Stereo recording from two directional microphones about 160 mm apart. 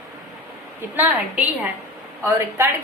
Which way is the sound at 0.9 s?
10° right (ahead or behind).